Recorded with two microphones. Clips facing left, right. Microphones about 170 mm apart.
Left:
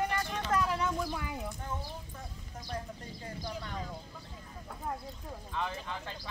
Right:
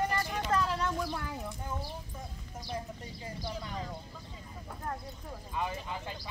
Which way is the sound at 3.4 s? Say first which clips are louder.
Right 1 dB; centre (ahead or behind).